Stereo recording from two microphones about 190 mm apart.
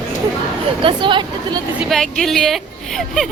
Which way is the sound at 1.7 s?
Centre (ahead or behind).